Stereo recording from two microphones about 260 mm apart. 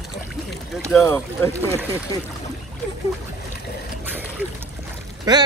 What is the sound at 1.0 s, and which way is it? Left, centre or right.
A man's voice, centre.